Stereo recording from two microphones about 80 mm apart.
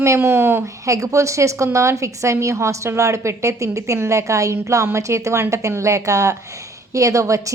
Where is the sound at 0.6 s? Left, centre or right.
Right.